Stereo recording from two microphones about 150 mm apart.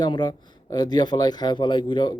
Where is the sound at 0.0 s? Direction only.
30° left (ahead or behind).